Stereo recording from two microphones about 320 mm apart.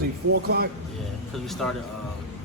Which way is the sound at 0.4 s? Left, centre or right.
Right.